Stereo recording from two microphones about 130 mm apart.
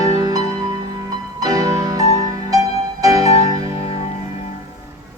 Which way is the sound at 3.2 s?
50° left (ahead or behind).